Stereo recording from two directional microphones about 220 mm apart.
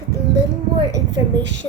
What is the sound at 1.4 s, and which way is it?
Speech, 55° right (ahead or behind).